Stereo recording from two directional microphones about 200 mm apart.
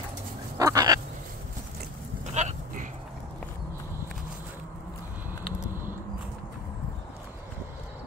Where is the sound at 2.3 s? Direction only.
40° right (ahead or behind).